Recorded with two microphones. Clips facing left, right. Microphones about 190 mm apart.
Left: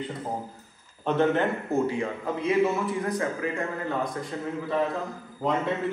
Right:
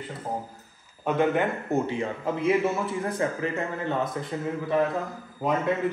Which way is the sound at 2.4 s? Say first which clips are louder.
Left 1 dB; 25° right (ahead or behind).